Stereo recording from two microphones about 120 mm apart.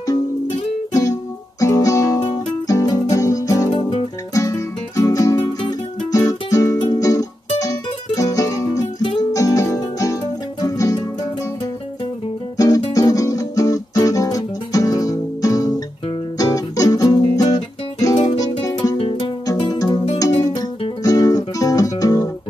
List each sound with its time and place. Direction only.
1.6 s guitar: 30° left (ahead or behind)
3.7 s guitar: 40° left (ahead or behind)
4.4 s guitar: 30° left (ahead or behind)
9.3 s music: 30° left (ahead or behind)
12.5 s music: 30° left (ahead or behind)
18.9 s music: 50° left (ahead or behind)
19.4 s music: 35° left (ahead or behind)